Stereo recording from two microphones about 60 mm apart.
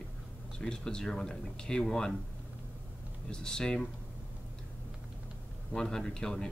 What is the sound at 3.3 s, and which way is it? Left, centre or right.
Speech, centre.